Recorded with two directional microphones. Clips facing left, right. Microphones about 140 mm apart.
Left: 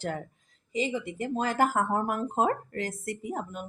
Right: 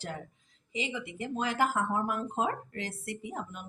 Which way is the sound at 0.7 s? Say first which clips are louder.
Left 6 dB; 40° left (ahead or behind).